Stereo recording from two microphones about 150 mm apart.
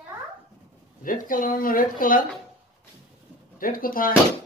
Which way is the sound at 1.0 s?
65° left (ahead or behind).